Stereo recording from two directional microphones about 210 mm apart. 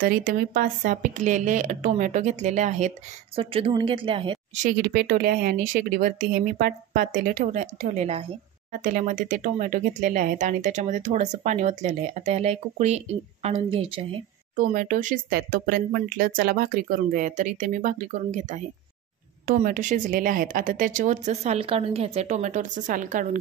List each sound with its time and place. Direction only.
0.0 s a woman's voice: 40° right (ahead or behind); by 4.6 s 25° right (ahead or behind)
4.6 s speech: 45° right (ahead or behind); by 14.2 s 25° right (ahead or behind)
14.5 s speech: 40° right (ahead or behind)